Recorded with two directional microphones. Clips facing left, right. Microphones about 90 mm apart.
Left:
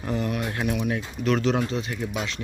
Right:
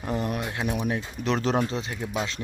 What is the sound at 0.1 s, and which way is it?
Speech, 35° right (ahead or behind).